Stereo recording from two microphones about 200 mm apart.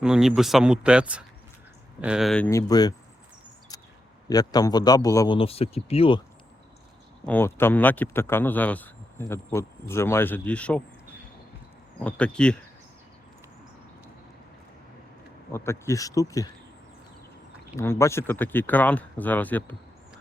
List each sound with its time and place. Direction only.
0.0 s speech: 5° right (ahead or behind)
2.5 s speech: 15° left (ahead or behind)
3.7 s a sound: 20° left (ahead or behind)
4.3 s a man's voice: 20° left (ahead or behind)
7.3 s speech: 10° left (ahead or behind)
12.0 s speech: 5° left (ahead or behind)
15.5 s speech: 15° left (ahead or behind)
17.7 s speech: 15° left (ahead or behind)